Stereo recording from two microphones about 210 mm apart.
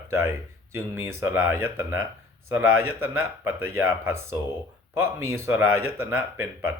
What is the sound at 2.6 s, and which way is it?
Speech, 75° right (ahead or behind).